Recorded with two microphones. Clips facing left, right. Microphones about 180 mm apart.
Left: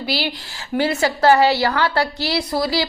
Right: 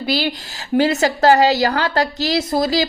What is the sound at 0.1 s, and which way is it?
A woman's voice, 45° right (ahead or behind).